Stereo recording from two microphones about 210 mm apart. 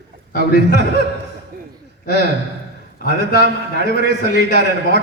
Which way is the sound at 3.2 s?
55° right (ahead or behind).